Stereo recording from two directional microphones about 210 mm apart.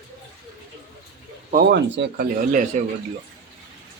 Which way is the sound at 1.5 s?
55° right (ahead or behind).